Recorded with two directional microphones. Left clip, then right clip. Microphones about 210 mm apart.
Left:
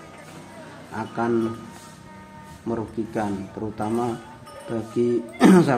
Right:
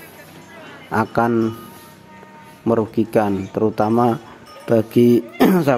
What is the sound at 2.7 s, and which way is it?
Speech, 50° right (ahead or behind).